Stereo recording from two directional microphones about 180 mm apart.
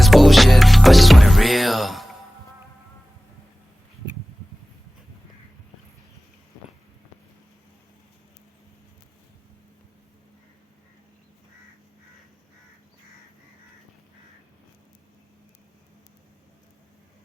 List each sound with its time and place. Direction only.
0.0 s music: centre (ahead or behind)